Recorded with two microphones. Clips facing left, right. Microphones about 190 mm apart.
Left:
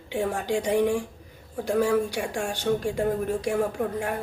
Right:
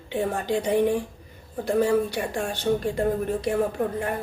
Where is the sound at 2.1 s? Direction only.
10° left (ahead or behind).